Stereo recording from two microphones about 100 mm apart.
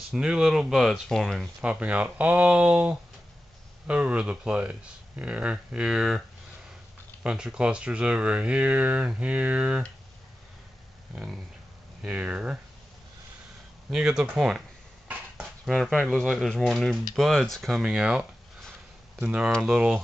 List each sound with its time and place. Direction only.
0.1 s speech: 5° right (ahead or behind)
1.6 s speech: 10° right (ahead or behind)
7.2 s speech: 10° right (ahead or behind)
12.0 s speech: 10° right (ahead or behind)
13.8 s speech: 5° right (ahead or behind)
15.6 s speech: 5° left (ahead or behind)